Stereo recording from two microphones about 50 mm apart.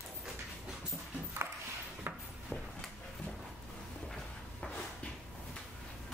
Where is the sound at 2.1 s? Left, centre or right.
Right.